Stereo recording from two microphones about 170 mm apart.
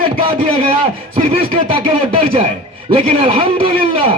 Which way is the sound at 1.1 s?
30° right (ahead or behind).